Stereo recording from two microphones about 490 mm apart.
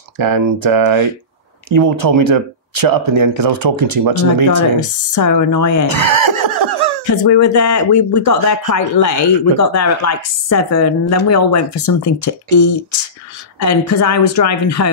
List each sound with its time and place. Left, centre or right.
0.2 s speech: right
4.7 s speech: left
5.9 s laughter: right
7.1 s speech: left